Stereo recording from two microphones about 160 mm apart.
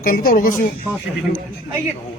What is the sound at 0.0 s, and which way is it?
Speech, 60° left (ahead or behind).